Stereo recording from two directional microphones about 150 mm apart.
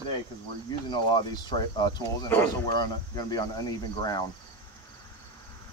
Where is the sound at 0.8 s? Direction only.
30° left (ahead or behind).